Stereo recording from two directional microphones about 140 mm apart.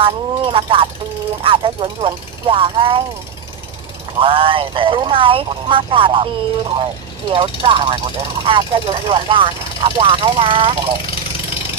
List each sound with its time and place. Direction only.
0.0 s speech: 40° right (ahead or behind)
4.2 s speech: 40° right (ahead or behind)